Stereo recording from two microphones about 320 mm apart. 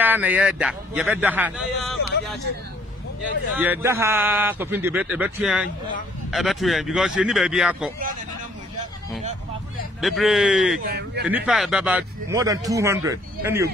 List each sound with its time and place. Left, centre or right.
0.0 s a man's voice: centre
3.5 s a man's voice: centre
9.9 s a man's voice: centre
10.9 s speech: right
11.2 s speech: centre